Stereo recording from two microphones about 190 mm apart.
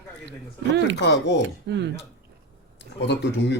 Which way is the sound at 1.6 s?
65° right (ahead or behind).